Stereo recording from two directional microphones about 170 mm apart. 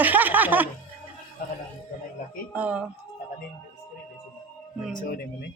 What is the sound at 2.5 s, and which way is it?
Speech, 10° right (ahead or behind).